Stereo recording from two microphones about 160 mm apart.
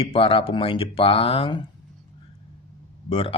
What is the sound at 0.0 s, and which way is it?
Speech, 35° left (ahead or behind).